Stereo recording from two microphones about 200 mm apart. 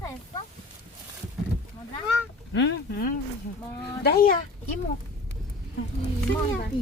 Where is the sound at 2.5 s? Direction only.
60° left (ahead or behind).